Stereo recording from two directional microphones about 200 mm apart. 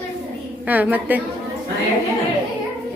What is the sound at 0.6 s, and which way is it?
Speech, 10° right (ahead or behind).